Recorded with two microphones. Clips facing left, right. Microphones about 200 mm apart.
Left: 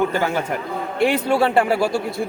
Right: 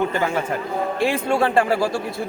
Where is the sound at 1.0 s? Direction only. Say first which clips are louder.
Left 3 dB; 5° left (ahead or behind).